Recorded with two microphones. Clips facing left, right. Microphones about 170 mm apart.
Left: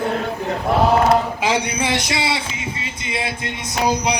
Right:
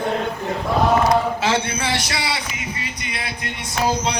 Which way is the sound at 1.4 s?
15° left (ahead or behind).